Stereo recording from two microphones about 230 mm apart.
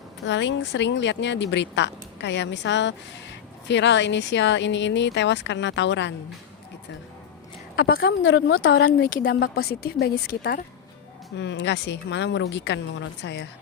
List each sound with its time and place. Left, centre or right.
0.3 s speech: left
7.8 s a woman's voice: left
8.2 s a woman's voice: left
9.0 s speech: left